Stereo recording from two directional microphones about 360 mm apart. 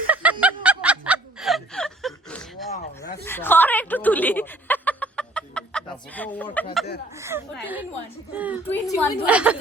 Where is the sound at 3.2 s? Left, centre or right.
Centre.